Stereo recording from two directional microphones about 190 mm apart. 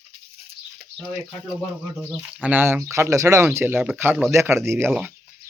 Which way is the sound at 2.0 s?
5° right (ahead or behind).